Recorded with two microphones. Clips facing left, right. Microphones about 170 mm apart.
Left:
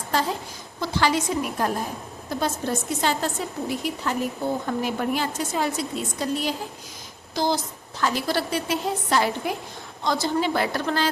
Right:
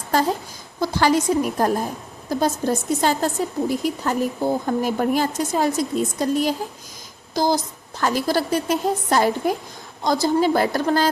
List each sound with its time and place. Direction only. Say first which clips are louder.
0.8 s a woman's voice: right 4 dB; 45° right (ahead or behind)